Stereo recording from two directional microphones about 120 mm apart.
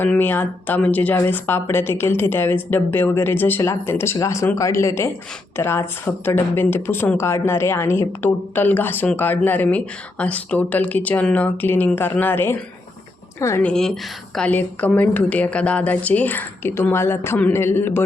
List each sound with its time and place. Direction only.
0.0 s speech: 15° left (ahead or behind)
13.6 s speech: 5° left (ahead or behind)